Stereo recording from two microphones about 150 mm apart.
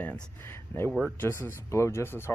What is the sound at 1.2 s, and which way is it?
Speech, 15° left (ahead or behind).